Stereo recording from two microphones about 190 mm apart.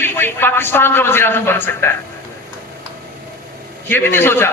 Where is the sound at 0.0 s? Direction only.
10° left (ahead or behind).